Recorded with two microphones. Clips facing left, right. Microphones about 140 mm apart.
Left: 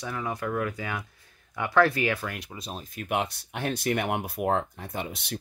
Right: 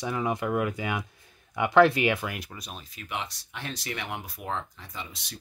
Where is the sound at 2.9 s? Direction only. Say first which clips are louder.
Left 7 dB; 50° left (ahead or behind).